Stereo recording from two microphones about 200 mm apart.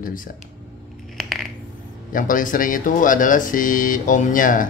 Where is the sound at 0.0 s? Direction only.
45° left (ahead or behind).